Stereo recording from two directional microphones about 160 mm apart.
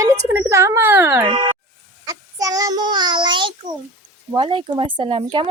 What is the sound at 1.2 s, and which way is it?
A child's voice, 30° right (ahead or behind).